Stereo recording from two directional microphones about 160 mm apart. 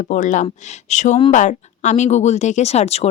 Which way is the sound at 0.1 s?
50° left (ahead or behind).